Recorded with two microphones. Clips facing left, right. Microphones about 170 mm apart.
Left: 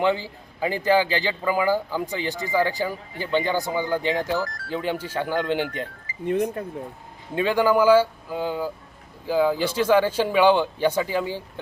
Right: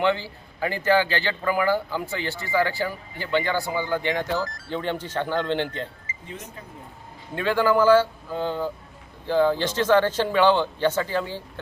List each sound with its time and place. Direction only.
0.0 s a man's voice: 15° left (ahead or behind)
6.2 s speech: 60° left (ahead or behind)
7.3 s a man's voice: 15° left (ahead or behind)